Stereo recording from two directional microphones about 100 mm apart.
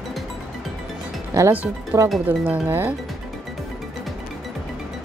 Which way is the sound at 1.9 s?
20° right (ahead or behind).